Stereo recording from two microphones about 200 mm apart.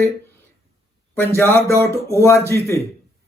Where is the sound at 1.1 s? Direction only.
10° left (ahead or behind).